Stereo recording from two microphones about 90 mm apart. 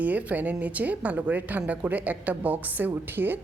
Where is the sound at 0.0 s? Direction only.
15° right (ahead or behind).